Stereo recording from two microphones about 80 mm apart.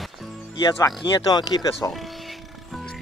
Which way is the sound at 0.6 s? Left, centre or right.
Left.